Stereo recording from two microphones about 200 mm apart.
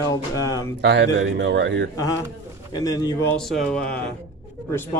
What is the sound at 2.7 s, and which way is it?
Speech, 20° left (ahead or behind).